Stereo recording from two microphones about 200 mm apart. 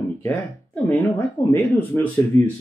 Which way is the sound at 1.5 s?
10° left (ahead or behind).